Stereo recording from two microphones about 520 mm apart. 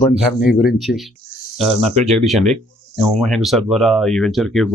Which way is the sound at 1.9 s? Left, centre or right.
Centre.